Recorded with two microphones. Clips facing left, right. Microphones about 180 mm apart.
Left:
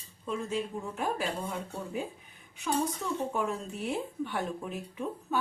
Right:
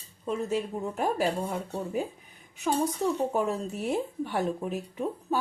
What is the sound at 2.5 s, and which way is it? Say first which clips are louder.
A woman's voice: right 3 dB; 40° right (ahead or behind).